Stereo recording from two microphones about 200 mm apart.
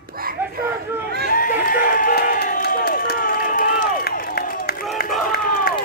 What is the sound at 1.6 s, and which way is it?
Crowd, 45° left (ahead or behind).